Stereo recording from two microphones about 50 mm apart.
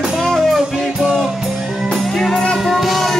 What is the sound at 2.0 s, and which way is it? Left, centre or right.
Music, centre.